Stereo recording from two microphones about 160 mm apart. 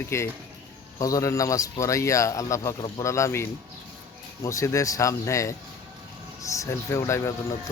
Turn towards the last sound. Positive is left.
turn(degrees=15)  # may be behind; listen again after turning